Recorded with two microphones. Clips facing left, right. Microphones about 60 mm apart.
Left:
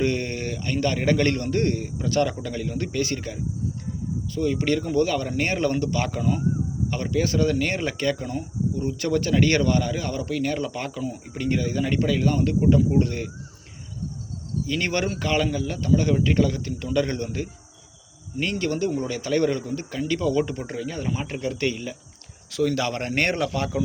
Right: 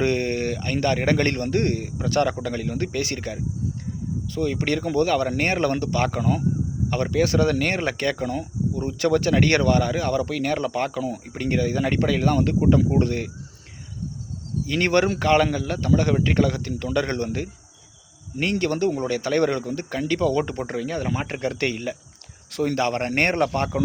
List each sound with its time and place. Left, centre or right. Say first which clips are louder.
0.0 s speech: right 3 dB; right
14.7 s speech: right 6 dB; right
18.6 s speech: right 1 dB; right
22.7 s a man's voice: right 3 dB; right